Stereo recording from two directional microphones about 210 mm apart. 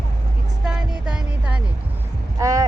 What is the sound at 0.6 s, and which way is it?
Music, 5° right (ahead or behind).